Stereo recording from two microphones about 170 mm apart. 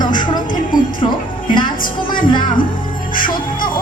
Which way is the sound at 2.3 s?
30° left (ahead or behind).